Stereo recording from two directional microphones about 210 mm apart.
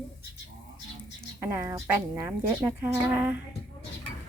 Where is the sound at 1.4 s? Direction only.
10° right (ahead or behind).